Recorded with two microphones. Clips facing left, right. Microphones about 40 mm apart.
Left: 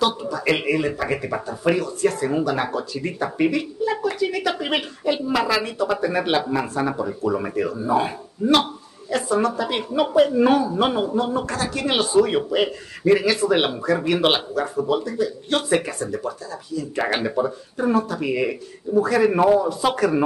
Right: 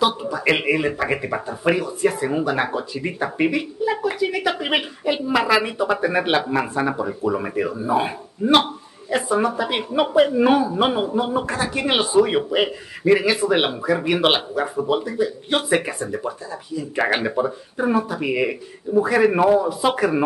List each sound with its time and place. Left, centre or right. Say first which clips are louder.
0.0 s speech: right 2 dB; centre